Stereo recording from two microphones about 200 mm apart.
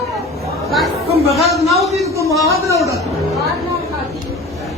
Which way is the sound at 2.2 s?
15° right (ahead or behind).